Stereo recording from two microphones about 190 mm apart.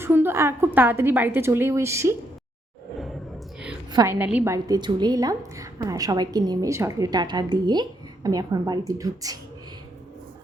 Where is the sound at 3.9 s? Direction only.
20° right (ahead or behind).